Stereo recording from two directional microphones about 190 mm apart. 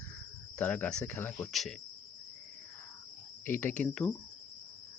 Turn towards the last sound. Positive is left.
turn(degrees=5)  # may be behind; listen again after turning